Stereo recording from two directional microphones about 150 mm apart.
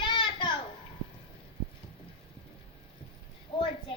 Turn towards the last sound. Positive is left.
turn(degrees=35)  # may be behind; listen again after turning